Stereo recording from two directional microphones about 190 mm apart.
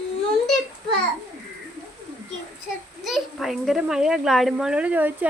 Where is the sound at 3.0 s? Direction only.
Centre (ahead or behind).